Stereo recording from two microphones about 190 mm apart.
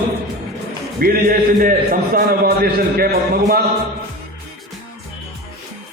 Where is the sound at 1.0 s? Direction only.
50° right (ahead or behind).